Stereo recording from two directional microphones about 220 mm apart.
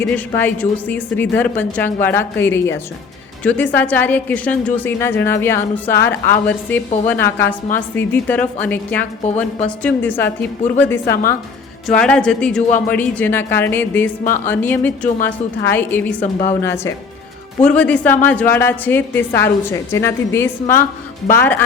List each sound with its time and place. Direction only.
0.0 s a woman's voice: 5° left (ahead or behind)